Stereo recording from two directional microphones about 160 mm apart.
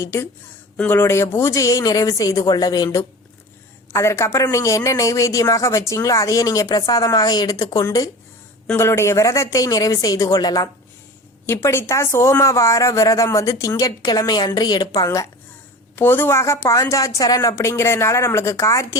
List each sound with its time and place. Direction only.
0.0 s a woman's voice: 20° left (ahead or behind)